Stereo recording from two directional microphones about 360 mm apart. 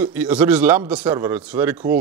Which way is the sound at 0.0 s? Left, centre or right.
Centre.